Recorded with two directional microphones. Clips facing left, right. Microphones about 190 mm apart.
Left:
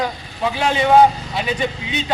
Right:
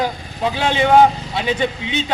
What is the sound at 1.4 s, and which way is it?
Speech, 25° right (ahead or behind).